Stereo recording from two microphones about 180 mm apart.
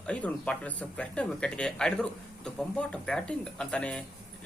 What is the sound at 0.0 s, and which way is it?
Speech, 5° left (ahead or behind).